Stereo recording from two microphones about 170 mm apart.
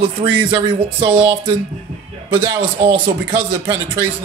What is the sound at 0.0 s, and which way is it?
A man's voice, 30° right (ahead or behind).